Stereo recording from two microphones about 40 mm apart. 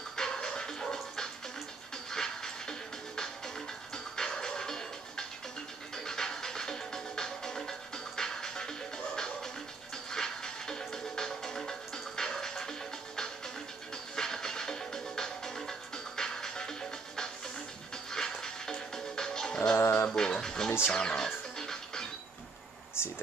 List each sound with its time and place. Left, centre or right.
0.2 s music: centre
2.0 s train: centre
3.9 s music: centre
18.1 s music: centre
20.9 s speech: centre
21.5 s music: centre
23.0 s a sound: left